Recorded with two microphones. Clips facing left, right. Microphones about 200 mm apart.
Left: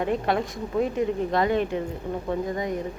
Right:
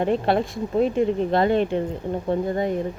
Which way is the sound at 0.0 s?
30° right (ahead or behind).